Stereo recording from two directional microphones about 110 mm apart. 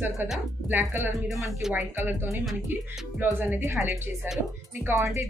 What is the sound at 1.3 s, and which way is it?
Speech, centre (ahead or behind).